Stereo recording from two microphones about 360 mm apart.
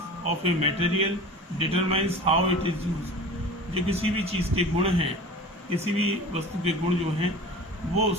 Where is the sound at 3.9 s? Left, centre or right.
Centre.